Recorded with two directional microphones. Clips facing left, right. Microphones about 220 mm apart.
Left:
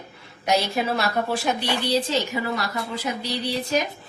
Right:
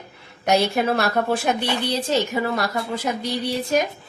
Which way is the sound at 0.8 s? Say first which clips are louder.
Right 3 dB; 55° right (ahead or behind).